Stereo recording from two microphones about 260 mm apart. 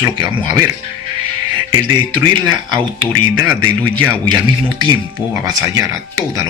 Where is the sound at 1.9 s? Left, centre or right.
Centre.